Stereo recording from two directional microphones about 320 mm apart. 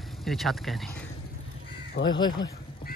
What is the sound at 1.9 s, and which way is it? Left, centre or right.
Speech, left.